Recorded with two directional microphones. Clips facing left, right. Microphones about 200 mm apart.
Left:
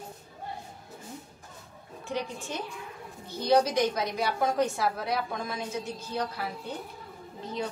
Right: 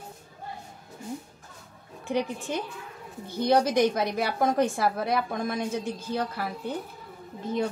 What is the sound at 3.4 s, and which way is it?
A woman's voice, 55° right (ahead or behind).